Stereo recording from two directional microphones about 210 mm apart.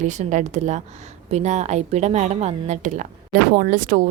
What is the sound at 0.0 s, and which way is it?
Speech, 35° right (ahead or behind).